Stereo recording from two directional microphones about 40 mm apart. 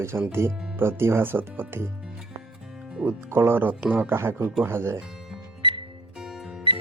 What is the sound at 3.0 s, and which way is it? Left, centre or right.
Speech, right.